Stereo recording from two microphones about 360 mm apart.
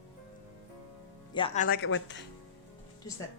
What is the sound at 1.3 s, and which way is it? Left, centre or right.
Speech, centre.